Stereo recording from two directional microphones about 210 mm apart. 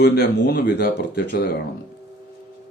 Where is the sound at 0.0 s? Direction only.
45° left (ahead or behind).